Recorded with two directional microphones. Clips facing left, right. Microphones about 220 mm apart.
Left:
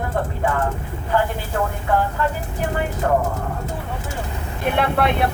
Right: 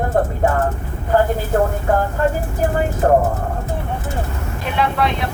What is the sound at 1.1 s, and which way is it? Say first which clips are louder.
Vehicle: right 6 dB; 45° right (ahead or behind).